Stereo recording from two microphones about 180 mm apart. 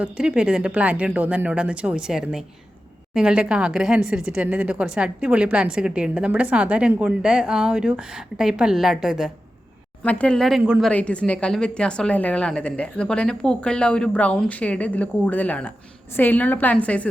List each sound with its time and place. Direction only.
0.0 s a woman's voice: 5° right (ahead or behind)
10.0 s speech: 10° left (ahead or behind)